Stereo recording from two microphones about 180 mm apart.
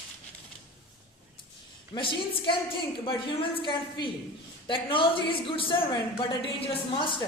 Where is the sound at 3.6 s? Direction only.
25° left (ahead or behind).